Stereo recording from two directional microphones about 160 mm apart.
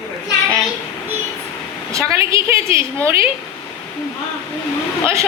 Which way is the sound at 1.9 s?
20° right (ahead or behind).